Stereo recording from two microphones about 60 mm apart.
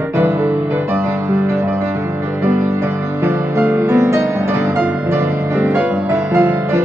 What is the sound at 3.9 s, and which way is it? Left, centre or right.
Music, right.